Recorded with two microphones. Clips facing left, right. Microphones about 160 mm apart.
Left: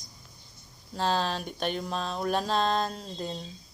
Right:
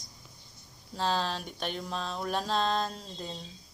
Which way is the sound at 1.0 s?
45° left (ahead or behind).